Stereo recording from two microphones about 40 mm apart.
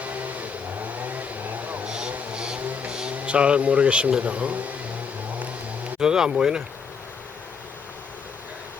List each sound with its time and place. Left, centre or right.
0.0 s vehicle: right
1.9 s vehicle: right
3.2 s speech: right
6.0 s speech: centre